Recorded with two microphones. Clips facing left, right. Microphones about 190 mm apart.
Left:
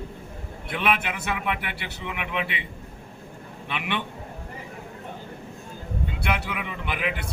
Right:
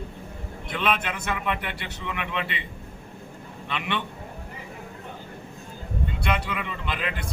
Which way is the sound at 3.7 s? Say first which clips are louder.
Even; 10° left (ahead or behind).